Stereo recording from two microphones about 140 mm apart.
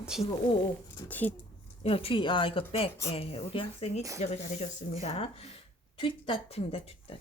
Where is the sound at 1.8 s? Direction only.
40° left (ahead or behind).